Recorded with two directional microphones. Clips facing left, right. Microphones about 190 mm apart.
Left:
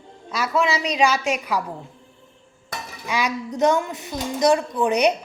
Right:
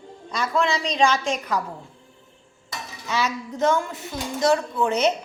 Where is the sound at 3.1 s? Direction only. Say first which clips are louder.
Left 1 dB; 15° left (ahead or behind).